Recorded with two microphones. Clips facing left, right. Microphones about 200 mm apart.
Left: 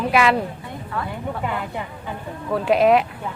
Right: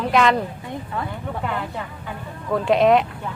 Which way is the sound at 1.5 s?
15° left (ahead or behind).